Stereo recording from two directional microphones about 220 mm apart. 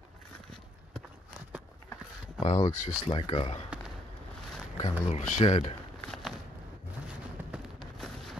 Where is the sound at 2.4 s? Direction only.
30° left (ahead or behind).